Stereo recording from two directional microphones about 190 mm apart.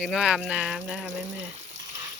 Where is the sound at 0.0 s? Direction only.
Centre (ahead or behind).